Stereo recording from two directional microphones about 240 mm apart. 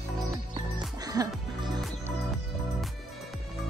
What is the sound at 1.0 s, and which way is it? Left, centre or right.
Music, centre.